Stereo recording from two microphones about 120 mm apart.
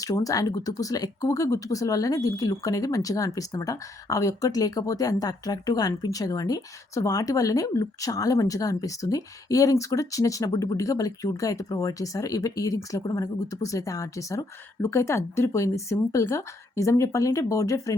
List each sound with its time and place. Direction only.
0.0 s speech: 30° left (ahead or behind)